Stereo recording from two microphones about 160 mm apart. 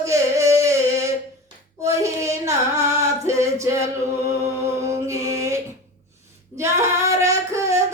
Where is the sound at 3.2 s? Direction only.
20° right (ahead or behind).